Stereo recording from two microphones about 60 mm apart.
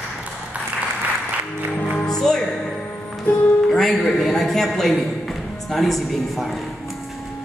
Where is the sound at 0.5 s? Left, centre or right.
Right.